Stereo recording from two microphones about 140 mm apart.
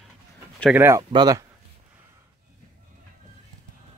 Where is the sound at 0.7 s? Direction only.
15° right (ahead or behind).